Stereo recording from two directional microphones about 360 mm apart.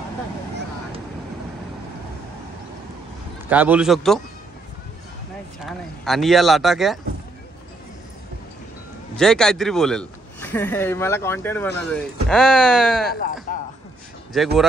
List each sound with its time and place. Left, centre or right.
3.4 s a man's voice: centre
5.7 s a man's voice: centre
9.1 s a man's voice: centre
13.1 s a sound: left
14.3 s a man's voice: centre